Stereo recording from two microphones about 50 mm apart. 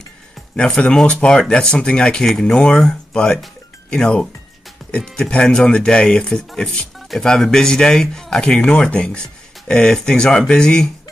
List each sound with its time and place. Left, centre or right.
0.6 s speech: centre